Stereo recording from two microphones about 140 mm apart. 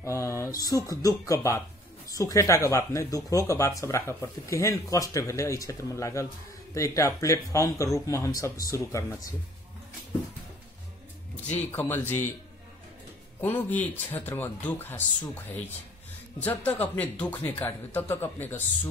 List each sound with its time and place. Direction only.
0.0 s speech: 20° left (ahead or behind)
11.4 s speech: 15° left (ahead or behind)
13.4 s speech: 10° left (ahead or behind)
16.3 s speech: 10° left (ahead or behind)